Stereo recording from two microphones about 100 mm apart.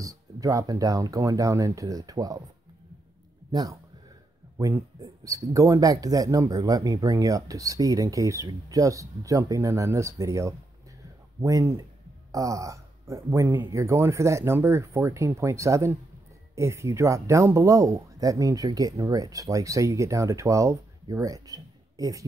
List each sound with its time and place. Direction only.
0.0 s speech: 35° right (ahead or behind)
5.0 s speech: 35° right (ahead or behind)